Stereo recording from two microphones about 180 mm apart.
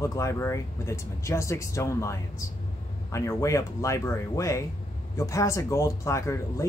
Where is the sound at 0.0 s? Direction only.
15° left (ahead or behind).